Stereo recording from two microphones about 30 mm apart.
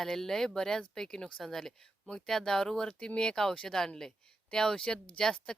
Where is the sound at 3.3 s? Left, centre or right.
Centre.